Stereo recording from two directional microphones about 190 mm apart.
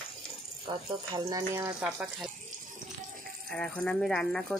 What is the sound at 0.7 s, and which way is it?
Speech, 20° right (ahead or behind).